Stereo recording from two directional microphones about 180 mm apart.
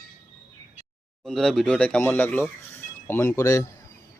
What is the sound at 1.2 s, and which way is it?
Speech, centre (ahead or behind).